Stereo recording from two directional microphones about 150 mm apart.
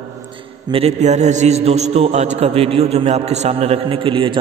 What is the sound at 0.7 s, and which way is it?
A man's voice, 40° right (ahead or behind).